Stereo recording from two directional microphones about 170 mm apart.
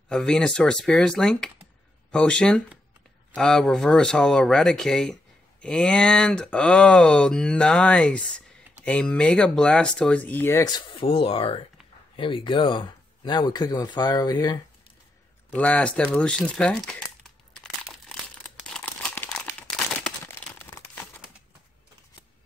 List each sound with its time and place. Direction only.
0.1 s speech: 5° left (ahead or behind); by 14.6 s 25° left (ahead or behind)
15.5 s speech: 10° left (ahead or behind)
17.6 s crumpling: centre (ahead or behind)
20.6 s crumpling: 10° left (ahead or behind)